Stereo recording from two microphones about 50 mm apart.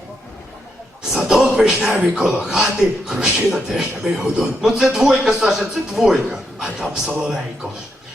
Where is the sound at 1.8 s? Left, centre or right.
Right.